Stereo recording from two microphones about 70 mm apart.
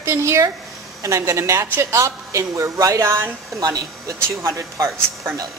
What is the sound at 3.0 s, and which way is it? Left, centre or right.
Speech, right.